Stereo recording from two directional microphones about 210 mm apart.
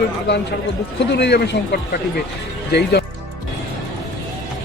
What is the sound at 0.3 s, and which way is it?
Speech, 50° left (ahead or behind).